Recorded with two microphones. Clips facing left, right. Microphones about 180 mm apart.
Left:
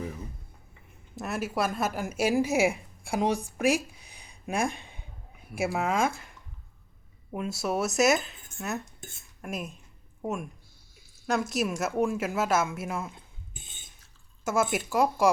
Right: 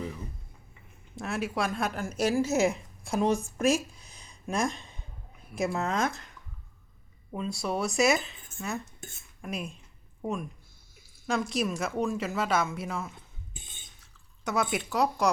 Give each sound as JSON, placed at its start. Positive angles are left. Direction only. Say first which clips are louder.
{"t": 1.1, "sound": "a woman's voice", "louder": "left 1 dB", "side_deg": 0}
{"t": 4.0, "sound": "a sound", "louder": "even", "side_deg": 60}
{"t": 5.7, "sound": "speech", "louder": "left 5 dB", "side_deg": 10}
{"t": 7.3, "sound": "speech", "louder": "left 2 dB", "side_deg": 5}
{"t": 9.0, "sound": "dishes", "louder": "even", "side_deg": 0}
{"t": 10.2, "sound": "speech", "louder": "even", "side_deg": 5}
{"t": 14.4, "sound": "speech", "louder": "left 2 dB", "side_deg": 5}